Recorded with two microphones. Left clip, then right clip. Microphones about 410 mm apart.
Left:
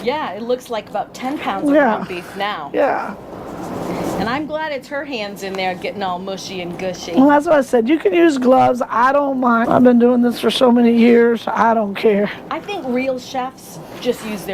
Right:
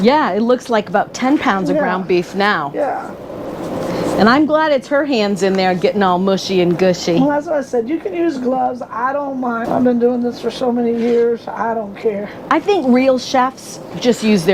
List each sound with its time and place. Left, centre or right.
0.0 s speech: right
2.7 s speech: left
4.3 s speech: right
7.3 s speech: left
12.5 s speech: right